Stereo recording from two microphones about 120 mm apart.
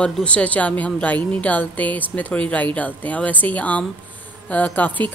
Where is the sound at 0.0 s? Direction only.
10° left (ahead or behind).